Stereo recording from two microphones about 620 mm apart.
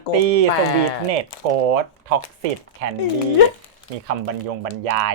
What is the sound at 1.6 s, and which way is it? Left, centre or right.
Speech, right.